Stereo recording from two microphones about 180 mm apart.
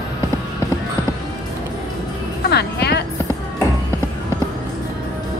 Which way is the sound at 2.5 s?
65° left (ahead or behind).